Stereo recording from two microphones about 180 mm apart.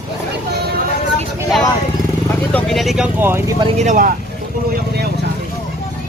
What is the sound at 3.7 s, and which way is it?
Speech, 40° right (ahead or behind).